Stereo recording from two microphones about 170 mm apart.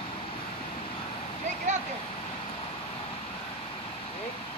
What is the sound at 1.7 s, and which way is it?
Vehicle, 45° right (ahead or behind).